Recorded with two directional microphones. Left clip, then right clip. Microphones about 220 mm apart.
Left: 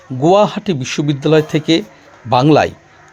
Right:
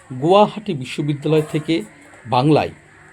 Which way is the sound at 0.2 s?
25° left (ahead or behind).